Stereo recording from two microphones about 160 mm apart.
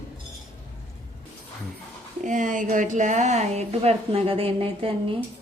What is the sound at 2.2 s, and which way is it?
A woman's voice, 50° right (ahead or behind).